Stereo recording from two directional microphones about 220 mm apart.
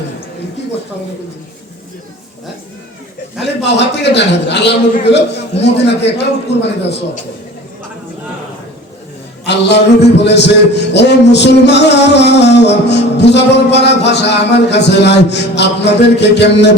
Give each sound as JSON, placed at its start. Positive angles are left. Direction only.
{"t": 3.6, "sound": "music", "side_deg": 50}
{"t": 9.5, "sound": "music", "side_deg": 50}